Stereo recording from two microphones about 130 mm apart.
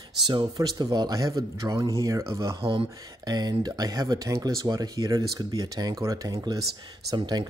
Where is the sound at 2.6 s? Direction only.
45° right (ahead or behind).